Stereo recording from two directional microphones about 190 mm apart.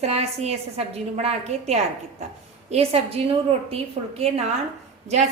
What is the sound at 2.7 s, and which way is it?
A woman's voice, 30° right (ahead or behind).